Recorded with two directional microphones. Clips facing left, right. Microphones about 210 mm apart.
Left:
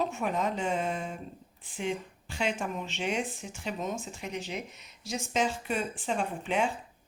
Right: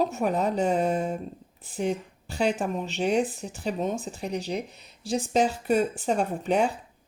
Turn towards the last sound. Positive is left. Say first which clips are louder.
# right 5 dB
turn(degrees=-40)  # may be behind; listen again after turning